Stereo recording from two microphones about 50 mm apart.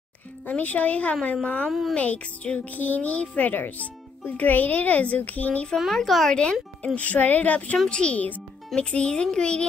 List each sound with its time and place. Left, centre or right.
0.5 s a child's voice: left
1.7 s speech: centre
2.0 s speech: left
5.9 s speech: centre
6.3 s speech: left
7.0 s speech: left
7.9 s a child's voice: centre